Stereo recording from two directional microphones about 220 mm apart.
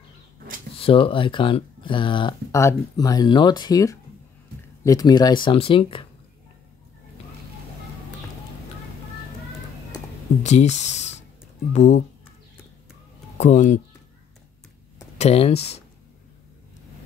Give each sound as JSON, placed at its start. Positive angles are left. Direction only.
{"t": 0.7, "sound": "speech", "side_deg": 25}
{"t": 10.4, "sound": "speech", "side_deg": 30}
{"t": 13.4, "sound": "speech", "side_deg": 35}
{"t": 15.1, "sound": "speech", "side_deg": 25}